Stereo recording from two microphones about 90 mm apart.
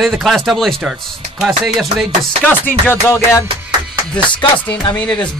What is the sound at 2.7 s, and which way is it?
Music, 25° left (ahead or behind).